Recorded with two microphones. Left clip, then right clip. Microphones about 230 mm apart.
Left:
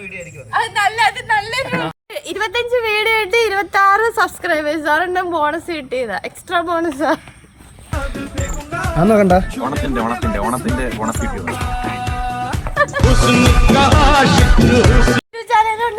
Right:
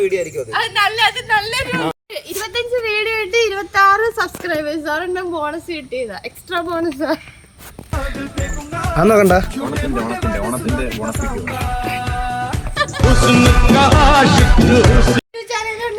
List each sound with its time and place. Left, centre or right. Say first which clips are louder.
0.5 s speech: left 1 dB; centre
7.9 s music: even; centre
10.4 s speech: left 2 dB; centre
11.5 s music: right 1 dB; centre
12.7 s music: left 4 dB; left
13.0 s music: right 3 dB; centre